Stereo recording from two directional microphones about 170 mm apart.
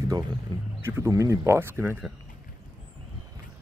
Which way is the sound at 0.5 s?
25° right (ahead or behind).